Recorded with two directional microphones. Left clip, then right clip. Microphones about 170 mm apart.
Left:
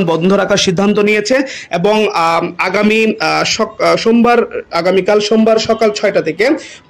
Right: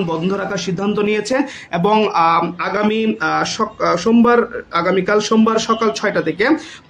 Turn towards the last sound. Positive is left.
turn(degrees=20)  # may be behind; listen again after turning